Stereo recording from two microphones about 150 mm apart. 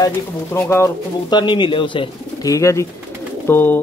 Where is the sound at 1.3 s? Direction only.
30° left (ahead or behind).